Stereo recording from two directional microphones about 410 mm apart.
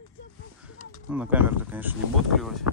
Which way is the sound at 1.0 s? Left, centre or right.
Centre.